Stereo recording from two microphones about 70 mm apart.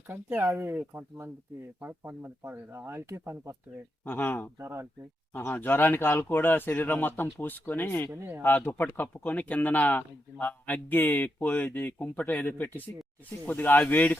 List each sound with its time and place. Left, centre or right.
0.1 s speech: right
1.8 s speech: right
2.4 s speech: right
4.0 s speech: left
4.5 s speech: right
5.3 s speech: left